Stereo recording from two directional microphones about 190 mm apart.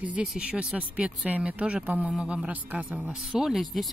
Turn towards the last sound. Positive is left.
turn(degrees=0)  # may be behind; listen again after turning